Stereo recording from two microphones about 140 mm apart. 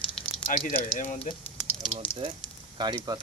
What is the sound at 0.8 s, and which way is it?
Speech, 65° left (ahead or behind).